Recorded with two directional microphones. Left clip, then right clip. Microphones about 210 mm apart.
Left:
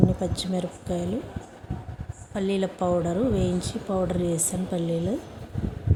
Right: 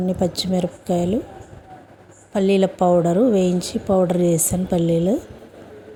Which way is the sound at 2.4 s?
25° right (ahead or behind).